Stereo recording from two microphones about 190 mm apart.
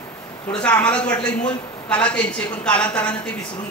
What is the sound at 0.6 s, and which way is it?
A man's voice, 10° left (ahead or behind).